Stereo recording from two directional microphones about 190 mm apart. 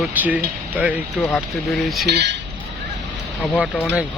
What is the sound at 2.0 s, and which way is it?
Speech, 60° right (ahead or behind).